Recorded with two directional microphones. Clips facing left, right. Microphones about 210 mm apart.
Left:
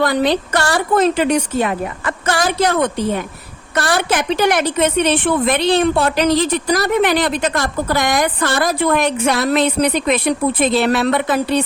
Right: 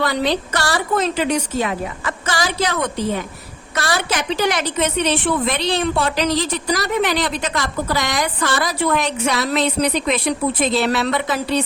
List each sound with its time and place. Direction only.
0.0 s a woman's voice: 50° left (ahead or behind)